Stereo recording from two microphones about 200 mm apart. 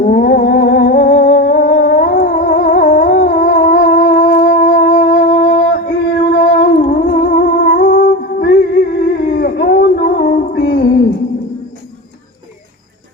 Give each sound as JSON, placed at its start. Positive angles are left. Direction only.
{"t": 0.0, "sound": "humming", "side_deg": 45}
{"t": 4.4, "sound": "music", "side_deg": 40}
{"t": 6.1, "sound": "humming", "side_deg": 50}